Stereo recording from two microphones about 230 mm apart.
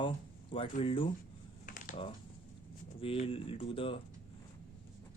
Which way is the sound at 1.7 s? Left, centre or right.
Left.